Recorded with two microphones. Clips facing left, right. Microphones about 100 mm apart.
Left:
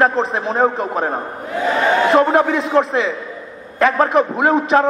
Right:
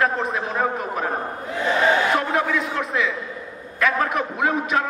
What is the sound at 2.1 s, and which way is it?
A man's voice, 30° left (ahead or behind).